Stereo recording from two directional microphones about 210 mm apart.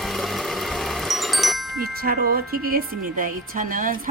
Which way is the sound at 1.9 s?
45° right (ahead or behind).